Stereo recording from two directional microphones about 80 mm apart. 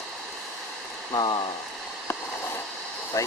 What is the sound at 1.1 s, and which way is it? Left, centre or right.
Speech, left.